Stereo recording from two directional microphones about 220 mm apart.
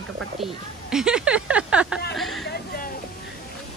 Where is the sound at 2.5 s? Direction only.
45° left (ahead or behind).